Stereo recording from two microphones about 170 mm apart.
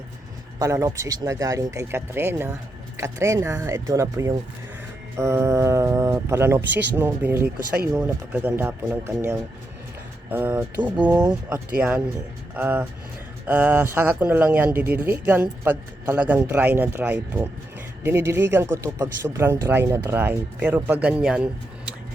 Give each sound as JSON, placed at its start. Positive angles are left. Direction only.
{"t": 0.6, "sound": "speech", "side_deg": -20}
{"t": 11.1, "sound": "speech", "side_deg": -20}